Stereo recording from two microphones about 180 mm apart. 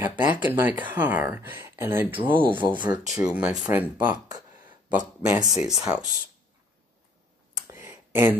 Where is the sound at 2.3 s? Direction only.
25° right (ahead or behind).